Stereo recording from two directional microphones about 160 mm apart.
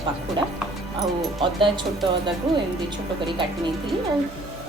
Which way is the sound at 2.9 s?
30° right (ahead or behind).